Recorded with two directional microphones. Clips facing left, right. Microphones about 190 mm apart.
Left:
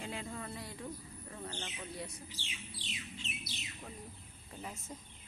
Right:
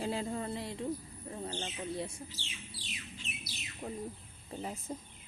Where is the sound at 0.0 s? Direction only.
35° right (ahead or behind).